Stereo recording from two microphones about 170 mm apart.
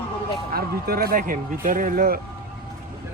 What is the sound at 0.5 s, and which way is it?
Speech, 60° right (ahead or behind).